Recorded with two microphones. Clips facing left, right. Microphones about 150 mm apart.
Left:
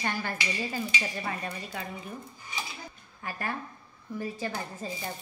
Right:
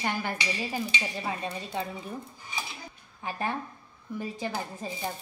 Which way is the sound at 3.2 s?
20° right (ahead or behind).